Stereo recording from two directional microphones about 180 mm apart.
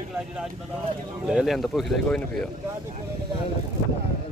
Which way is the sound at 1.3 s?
Centre (ahead or behind).